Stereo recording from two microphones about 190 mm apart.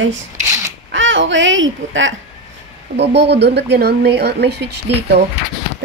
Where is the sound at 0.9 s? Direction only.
75° right (ahead or behind).